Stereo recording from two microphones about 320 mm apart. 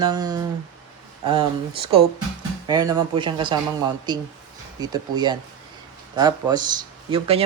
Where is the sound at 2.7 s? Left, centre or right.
Centre.